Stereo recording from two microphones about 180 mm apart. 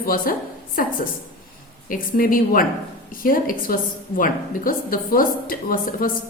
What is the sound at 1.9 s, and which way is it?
A woman's voice, 50° left (ahead or behind).